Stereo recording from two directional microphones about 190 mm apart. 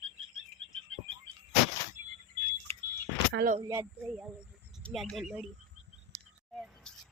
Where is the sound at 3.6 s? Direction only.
15° right (ahead or behind).